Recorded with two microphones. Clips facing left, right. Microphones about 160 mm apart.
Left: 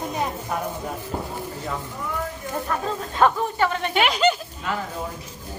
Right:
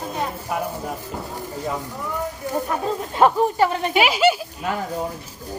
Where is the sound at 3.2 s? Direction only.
30° right (ahead or behind).